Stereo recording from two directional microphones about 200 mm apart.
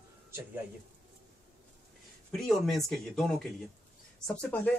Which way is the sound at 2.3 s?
Centre (ahead or behind).